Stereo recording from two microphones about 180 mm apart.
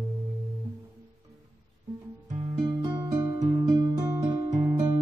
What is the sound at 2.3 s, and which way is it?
Music, 20° right (ahead or behind).